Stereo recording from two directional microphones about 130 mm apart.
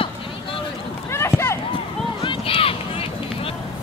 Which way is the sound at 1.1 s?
20° left (ahead or behind).